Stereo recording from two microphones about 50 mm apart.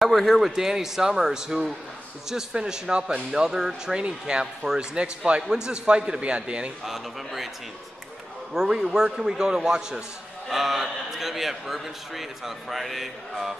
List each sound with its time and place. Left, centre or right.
0.0 s a sound: centre
0.4 s a man's voice: centre
6.8 s a man's voice: centre
8.5 s a man's voice: centre
10.5 s a man's voice: centre